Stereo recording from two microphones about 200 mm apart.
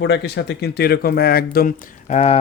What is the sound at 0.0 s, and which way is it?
Speech, 60° left (ahead or behind).